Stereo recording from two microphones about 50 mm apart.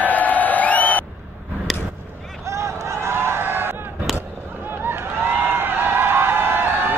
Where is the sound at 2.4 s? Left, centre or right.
Right.